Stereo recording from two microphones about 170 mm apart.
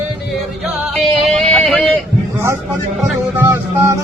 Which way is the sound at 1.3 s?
Centre (ahead or behind).